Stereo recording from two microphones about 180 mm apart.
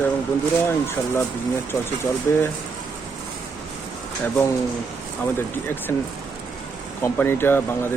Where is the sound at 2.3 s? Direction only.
15° left (ahead or behind).